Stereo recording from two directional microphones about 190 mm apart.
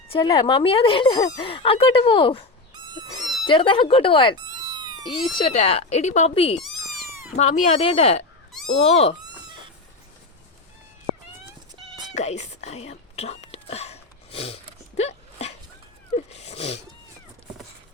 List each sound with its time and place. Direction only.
0.1 s speech: 20° left (ahead or behind)
5.5 s speech: 35° left (ahead or behind)
6.7 s a sound: centre (ahead or behind)
7.3 s speech: 40° left (ahead or behind)
12.1 s whispering: 35° left (ahead or behind)
16.1 s cat: 35° left (ahead or behind)